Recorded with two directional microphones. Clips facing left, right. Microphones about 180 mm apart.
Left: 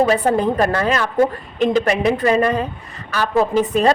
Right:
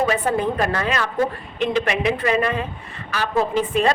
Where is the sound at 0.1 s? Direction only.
40° left (ahead or behind).